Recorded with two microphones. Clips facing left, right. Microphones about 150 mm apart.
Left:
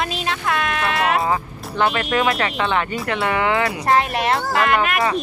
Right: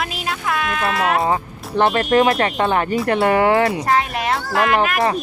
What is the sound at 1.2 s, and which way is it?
Speech, 30° right (ahead or behind).